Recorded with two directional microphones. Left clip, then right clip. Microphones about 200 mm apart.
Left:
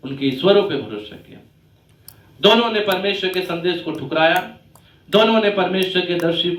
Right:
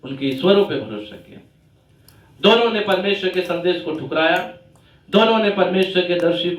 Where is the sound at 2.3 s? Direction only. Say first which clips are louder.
Even; 40° left (ahead or behind).